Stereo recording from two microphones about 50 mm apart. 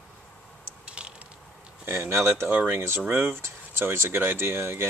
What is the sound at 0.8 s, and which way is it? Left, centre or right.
Mechanisms, centre.